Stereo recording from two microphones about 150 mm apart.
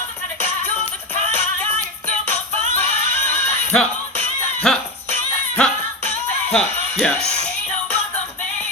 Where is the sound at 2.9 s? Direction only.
15° left (ahead or behind).